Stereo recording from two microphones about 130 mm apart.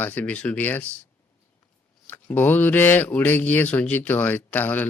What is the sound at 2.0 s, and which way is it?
Speech, 15° left (ahead or behind).